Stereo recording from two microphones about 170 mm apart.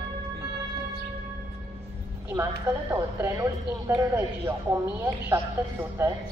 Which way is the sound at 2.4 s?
20° right (ahead or behind).